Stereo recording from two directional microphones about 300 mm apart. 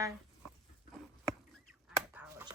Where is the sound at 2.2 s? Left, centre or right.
Centre.